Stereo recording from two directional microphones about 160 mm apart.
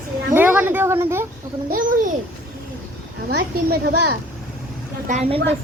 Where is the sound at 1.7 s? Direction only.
55° right (ahead or behind).